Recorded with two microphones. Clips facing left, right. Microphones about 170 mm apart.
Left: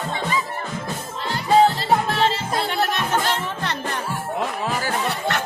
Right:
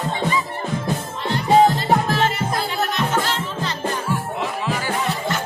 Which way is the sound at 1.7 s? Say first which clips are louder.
Right 1 dB; 30° left (ahead or behind).